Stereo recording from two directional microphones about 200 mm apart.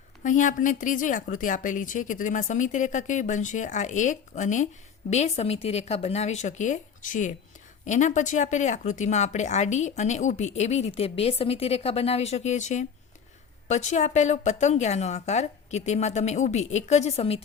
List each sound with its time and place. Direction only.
0.2 s speech: 40° left (ahead or behind)